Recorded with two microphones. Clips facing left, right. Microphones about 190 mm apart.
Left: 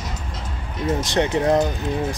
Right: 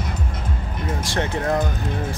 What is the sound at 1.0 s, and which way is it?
Speech, 20° left (ahead or behind).